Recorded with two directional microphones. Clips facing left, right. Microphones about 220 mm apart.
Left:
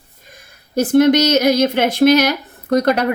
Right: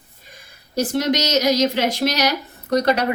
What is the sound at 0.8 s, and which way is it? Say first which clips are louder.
Speech: left 8 dB; 55° left (ahead or behind).